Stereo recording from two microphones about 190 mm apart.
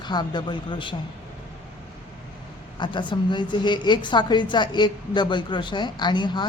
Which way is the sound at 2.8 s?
25° left (ahead or behind).